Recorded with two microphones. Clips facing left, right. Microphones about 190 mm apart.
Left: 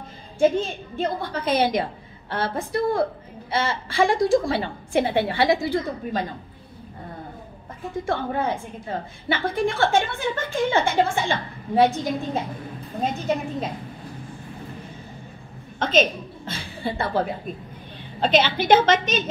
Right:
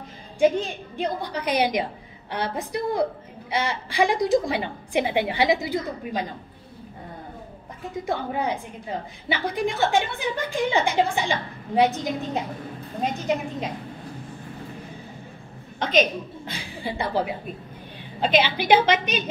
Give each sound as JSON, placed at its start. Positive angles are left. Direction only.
{"t": 0.4, "sound": "a woman's voice", "side_deg": -15}
{"t": 8.1, "sound": "a woman's voice", "side_deg": -15}
{"t": 15.8, "sound": "a woman's voice", "side_deg": -15}